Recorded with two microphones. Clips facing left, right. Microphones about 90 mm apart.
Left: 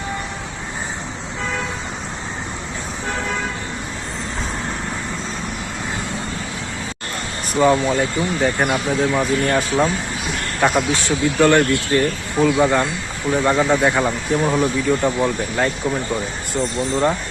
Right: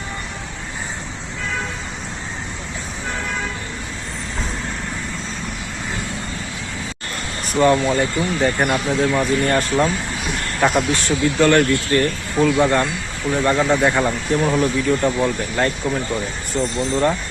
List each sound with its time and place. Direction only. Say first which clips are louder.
7.5 s speech: even; 5° left (ahead or behind)
11.3 s speech: left 1 dB; 15° left (ahead or behind)
16.7 s speech: even; 15° left (ahead or behind)